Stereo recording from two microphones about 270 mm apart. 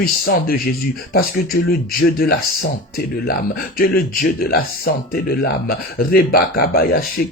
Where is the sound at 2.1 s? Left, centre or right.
Left.